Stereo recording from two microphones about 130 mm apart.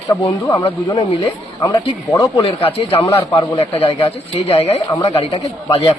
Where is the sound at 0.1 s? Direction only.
30° left (ahead or behind).